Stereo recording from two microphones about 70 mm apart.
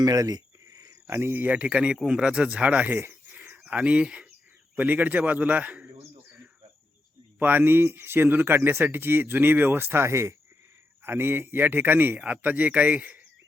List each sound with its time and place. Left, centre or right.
0.0 s a sound: right
1.0 s speech: right
1.5 s speech: centre
3.0 s a sound: right
4.7 s speech: right
7.3 s speech: right
11.0 s speech: right